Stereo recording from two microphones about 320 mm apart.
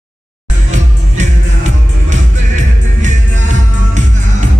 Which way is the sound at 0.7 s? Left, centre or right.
Right.